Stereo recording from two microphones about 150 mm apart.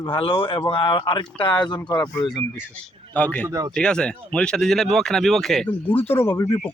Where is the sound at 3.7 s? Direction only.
5° left (ahead or behind).